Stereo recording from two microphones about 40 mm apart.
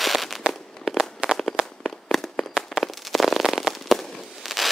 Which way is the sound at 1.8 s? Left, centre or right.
Centre.